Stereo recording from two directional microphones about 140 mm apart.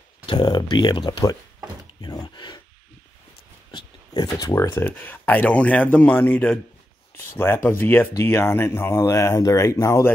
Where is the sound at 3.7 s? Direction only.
30° left (ahead or behind).